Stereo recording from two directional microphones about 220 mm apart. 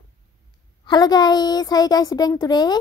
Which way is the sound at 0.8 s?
20° left (ahead or behind).